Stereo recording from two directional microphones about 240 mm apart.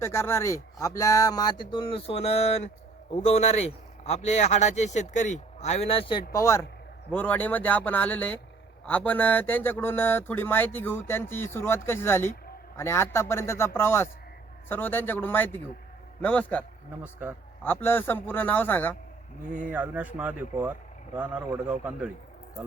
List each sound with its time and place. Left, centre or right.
0.0 s speech: centre
17.0 s speech: centre
17.6 s speech: centre
19.6 s speech: centre